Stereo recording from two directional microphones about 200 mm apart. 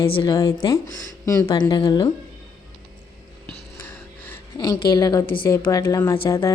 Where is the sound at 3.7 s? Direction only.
10° left (ahead or behind).